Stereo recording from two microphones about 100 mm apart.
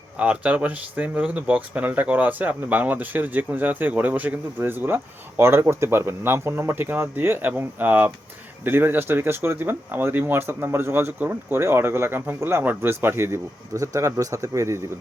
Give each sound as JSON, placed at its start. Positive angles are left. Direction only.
{"t": 0.2, "sound": "speech", "side_deg": -10}